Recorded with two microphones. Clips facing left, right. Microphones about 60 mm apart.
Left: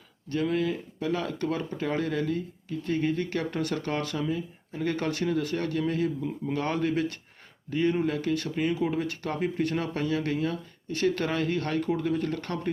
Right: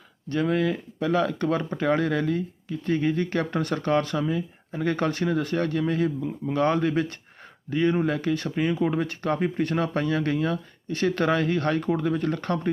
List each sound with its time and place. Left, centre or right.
0.3 s speech: right